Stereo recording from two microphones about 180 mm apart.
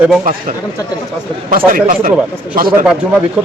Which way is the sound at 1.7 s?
50° right (ahead or behind).